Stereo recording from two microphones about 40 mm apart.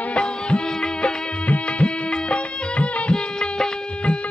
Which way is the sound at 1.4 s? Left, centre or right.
Left.